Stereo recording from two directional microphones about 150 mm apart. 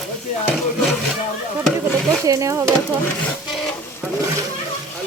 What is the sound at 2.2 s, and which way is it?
Speech, 20° right (ahead or behind).